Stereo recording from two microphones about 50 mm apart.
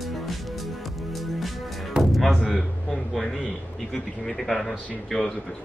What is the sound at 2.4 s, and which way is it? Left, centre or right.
A man's voice, centre.